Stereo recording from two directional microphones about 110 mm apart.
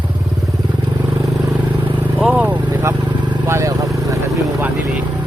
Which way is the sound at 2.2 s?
15° right (ahead or behind).